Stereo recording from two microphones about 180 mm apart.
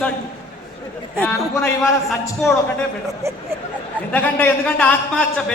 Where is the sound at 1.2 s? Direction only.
10° left (ahead or behind).